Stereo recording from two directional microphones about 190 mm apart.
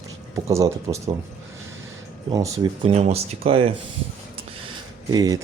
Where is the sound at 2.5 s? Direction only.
20° right (ahead or behind).